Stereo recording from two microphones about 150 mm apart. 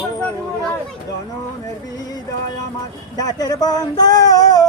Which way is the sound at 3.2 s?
25° left (ahead or behind).